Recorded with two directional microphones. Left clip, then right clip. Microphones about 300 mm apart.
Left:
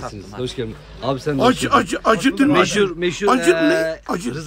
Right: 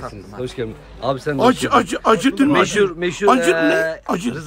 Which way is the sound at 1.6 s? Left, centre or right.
Right.